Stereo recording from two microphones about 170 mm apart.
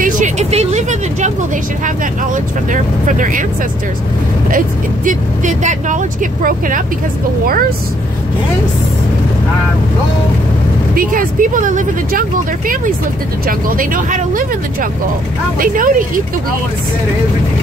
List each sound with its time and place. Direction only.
0.0 s vehicle: 45° right (ahead or behind)
2.3 s speech: 50° right (ahead or behind)
4.5 s speech: 50° right (ahead or behind)
11.0 s speech: 55° right (ahead or behind)